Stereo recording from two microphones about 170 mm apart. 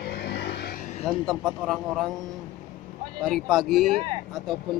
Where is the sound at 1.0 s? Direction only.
Centre (ahead or behind).